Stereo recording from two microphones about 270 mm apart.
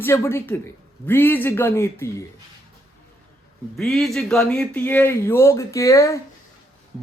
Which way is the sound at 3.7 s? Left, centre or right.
Centre.